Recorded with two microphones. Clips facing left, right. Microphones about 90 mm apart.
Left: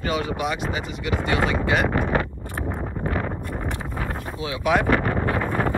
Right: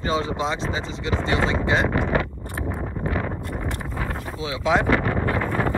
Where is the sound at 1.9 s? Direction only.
50° left (ahead or behind).